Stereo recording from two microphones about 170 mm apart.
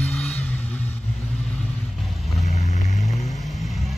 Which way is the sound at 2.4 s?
40° left (ahead or behind).